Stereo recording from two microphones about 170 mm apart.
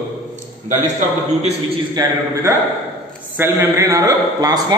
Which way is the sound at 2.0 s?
25° right (ahead or behind).